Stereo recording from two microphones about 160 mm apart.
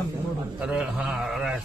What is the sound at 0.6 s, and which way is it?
Speech, 5° right (ahead or behind).